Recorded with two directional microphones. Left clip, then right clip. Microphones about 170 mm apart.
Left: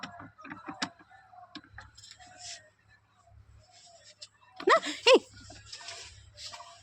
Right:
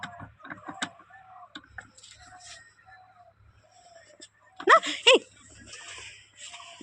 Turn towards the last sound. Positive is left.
turn(degrees=5)  # may be behind; listen again after turning